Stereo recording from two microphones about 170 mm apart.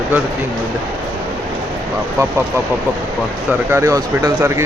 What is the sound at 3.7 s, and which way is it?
Speech, 15° right (ahead or behind).